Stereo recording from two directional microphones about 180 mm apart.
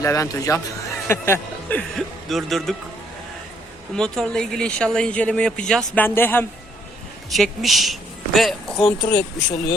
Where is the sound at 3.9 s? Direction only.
5° left (ahead or behind).